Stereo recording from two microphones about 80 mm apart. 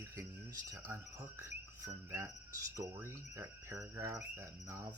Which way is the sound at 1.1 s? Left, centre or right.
Right.